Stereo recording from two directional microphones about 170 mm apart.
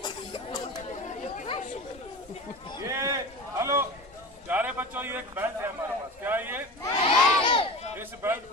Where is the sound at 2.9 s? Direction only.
15° right (ahead or behind).